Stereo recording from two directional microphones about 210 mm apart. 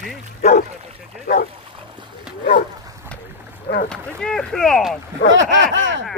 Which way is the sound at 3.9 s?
5° left (ahead or behind).